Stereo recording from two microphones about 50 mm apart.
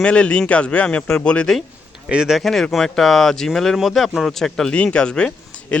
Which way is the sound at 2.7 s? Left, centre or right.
Centre.